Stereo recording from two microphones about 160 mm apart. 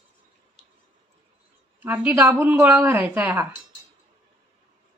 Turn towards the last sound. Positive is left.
turn(degrees=-10)  # may be behind; listen again after turning